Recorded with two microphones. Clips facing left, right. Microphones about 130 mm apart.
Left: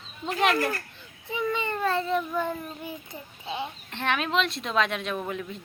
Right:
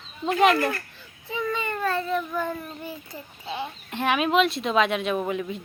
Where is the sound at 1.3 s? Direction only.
20° left (ahead or behind).